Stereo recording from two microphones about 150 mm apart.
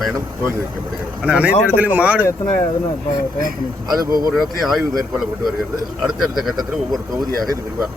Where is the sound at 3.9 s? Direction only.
25° right (ahead or behind).